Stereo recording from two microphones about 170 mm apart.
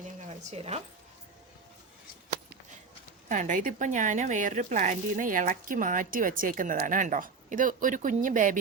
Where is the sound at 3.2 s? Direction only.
45° right (ahead or behind).